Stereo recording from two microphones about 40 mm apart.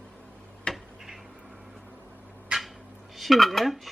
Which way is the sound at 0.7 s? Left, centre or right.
Left.